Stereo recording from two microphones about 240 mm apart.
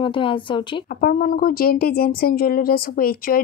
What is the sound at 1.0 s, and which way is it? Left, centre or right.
Speech, left.